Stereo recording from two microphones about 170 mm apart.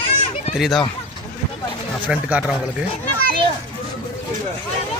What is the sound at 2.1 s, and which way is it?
Speech, 5° right (ahead or behind).